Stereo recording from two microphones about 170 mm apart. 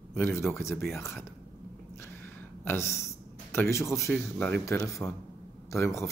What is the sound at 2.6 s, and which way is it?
Speech, 15° left (ahead or behind).